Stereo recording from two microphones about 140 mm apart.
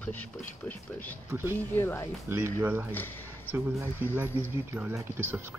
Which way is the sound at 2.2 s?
20° right (ahead or behind).